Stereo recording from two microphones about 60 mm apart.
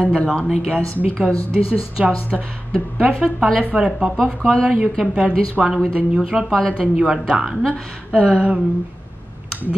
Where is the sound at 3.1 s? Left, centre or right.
Centre.